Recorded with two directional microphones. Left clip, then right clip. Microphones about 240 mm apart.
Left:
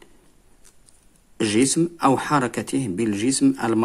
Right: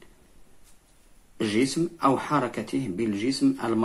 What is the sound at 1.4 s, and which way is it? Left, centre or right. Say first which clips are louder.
Speech: left 5 dB; left.